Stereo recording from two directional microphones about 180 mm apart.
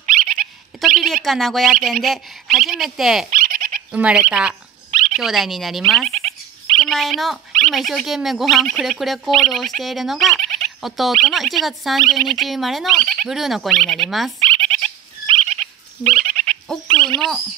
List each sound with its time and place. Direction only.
0.0 s dog: 50° right (ahead or behind)
0.7 s speech: centre (ahead or behind)
3.3 s a sound: 50° right (ahead or behind)
3.9 s speech: 5° right (ahead or behind)
6.0 s frog: 35° right (ahead or behind)
6.8 s speech: centre (ahead or behind)
14.4 s a sound: 35° right (ahead or behind)
16.9 s speech: 30° right (ahead or behind)